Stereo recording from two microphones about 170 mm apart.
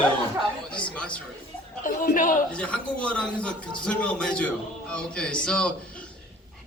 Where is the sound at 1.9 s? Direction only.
55° left (ahead or behind).